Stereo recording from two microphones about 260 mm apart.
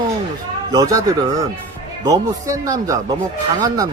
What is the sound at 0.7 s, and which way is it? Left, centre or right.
Speech, centre.